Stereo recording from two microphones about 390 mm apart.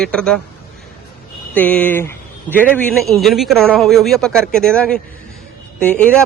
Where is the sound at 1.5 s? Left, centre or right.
Centre.